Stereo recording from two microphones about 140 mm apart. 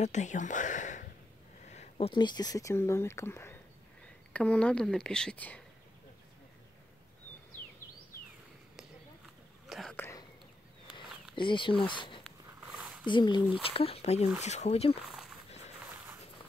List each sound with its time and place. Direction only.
0.0 s speech: 60° left (ahead or behind)
1.7 s speech: 50° left (ahead or behind); by 3.5 s 20° left (ahead or behind)
4.3 s speech: 10° left (ahead or behind)
9.7 s whispering: centre (ahead or behind)
9.9 s whispering: 20° left (ahead or behind)
11.3 s speech: 35° left (ahead or behind)
12.7 s a sound: 5° right (ahead or behind)
13.0 s speech: 35° left (ahead or behind)
15.0 s a sound: 5° right (ahead or behind)